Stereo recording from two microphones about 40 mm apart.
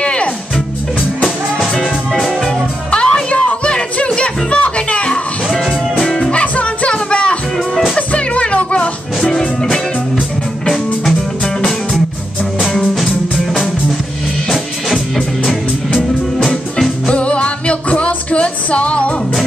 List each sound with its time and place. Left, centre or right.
0.0 s music: left
1.6 s music: centre
2.9 s music: left
5.9 s music: centre
6.3 s music: left
9.3 s music: centre
10.7 s music: centre
17.1 s music: left